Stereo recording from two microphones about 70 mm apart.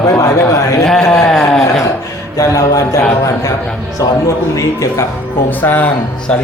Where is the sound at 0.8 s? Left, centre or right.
Centre.